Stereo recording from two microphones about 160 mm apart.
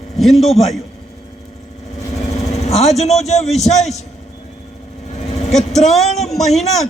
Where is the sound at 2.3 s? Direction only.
45° left (ahead or behind).